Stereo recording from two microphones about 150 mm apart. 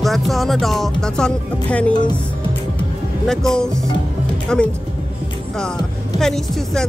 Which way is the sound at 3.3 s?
5° left (ahead or behind).